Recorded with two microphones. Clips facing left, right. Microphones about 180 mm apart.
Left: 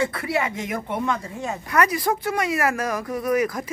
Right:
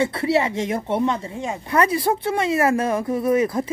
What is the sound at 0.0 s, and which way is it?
Speech, 25° right (ahead or behind).